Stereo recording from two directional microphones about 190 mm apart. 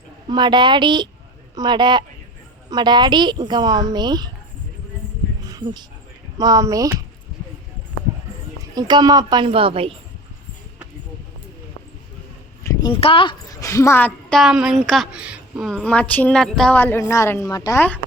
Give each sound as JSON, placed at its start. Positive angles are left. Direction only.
{"t": 0.3, "sound": "speech", "side_deg": -25}
{"t": 5.5, "sound": "a sound", "side_deg": -20}
{"t": 6.3, "sound": "speech", "side_deg": -20}
{"t": 8.7, "sound": "speech", "side_deg": -20}
{"t": 12.6, "sound": "a woman's voice", "side_deg": 25}